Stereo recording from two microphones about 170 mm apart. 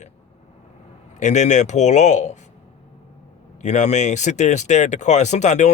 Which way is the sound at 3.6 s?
45° left (ahead or behind).